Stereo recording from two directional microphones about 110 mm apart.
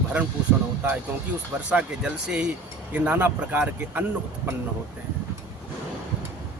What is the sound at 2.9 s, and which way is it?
Speech, 15° right (ahead or behind).